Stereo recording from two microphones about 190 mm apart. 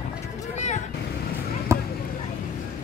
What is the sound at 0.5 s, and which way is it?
Vehicle, 35° left (ahead or behind).